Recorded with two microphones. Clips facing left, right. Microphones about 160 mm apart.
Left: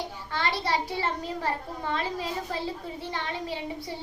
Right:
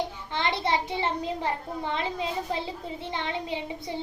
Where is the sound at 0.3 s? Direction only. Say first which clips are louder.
Even; 20° right (ahead or behind).